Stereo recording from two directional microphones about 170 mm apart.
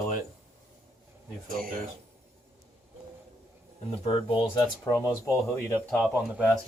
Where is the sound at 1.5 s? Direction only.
60° right (ahead or behind).